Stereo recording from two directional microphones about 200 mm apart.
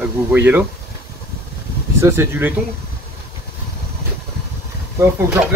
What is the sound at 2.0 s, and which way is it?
Speech, 10° right (ahead or behind).